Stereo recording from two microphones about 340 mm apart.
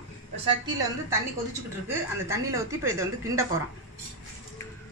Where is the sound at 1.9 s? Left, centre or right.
Centre.